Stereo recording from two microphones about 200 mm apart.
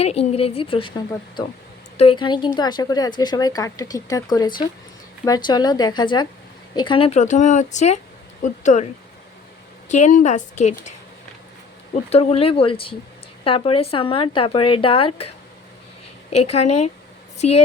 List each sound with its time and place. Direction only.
0.0 s speech: 30° left (ahead or behind)
9.9 s speech: 40° left (ahead or behind)
12.1 s speech: 30° left (ahead or behind)
16.3 s a woman's voice: 30° left (ahead or behind)